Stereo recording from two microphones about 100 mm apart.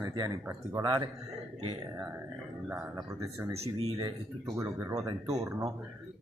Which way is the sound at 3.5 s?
90° right.